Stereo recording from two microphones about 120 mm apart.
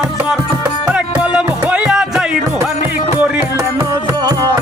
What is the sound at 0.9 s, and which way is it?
Music, 10° right (ahead or behind).